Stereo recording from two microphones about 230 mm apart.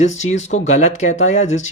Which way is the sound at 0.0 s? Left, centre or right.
Left.